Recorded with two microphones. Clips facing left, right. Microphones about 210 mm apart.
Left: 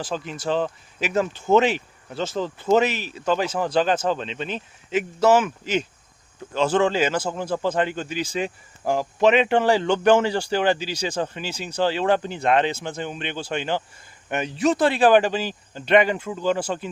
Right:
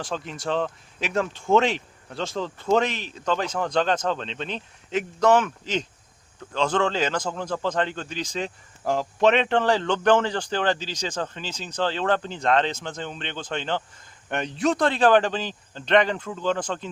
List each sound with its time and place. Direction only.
0.0 s speech: centre (ahead or behind)